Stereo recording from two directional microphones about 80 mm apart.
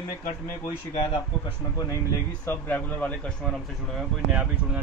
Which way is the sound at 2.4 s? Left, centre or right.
Left.